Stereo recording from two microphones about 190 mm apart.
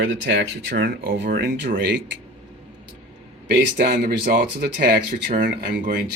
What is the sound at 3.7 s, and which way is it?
Speech, 50° right (ahead or behind).